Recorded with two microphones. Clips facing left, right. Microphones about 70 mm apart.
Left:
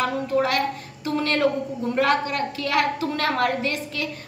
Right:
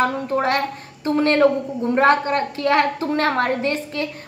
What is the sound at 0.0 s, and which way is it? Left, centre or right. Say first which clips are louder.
A woman's voice: right 2 dB; right.